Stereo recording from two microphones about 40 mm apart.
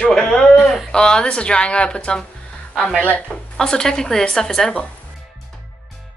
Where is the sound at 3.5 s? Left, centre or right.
Centre.